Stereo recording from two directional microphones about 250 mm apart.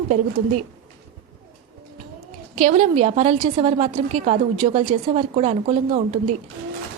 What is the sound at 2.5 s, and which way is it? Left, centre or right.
Speech, right.